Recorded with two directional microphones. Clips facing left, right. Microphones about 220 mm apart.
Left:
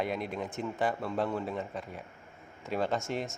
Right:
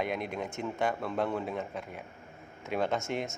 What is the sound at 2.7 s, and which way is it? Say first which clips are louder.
Speech: right 1 dB; 55° right (ahead or behind).